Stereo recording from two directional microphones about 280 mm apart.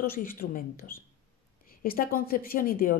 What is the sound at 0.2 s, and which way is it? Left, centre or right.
Speech, left.